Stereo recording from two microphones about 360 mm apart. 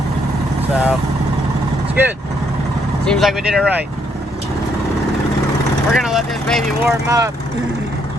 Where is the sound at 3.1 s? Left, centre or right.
Centre.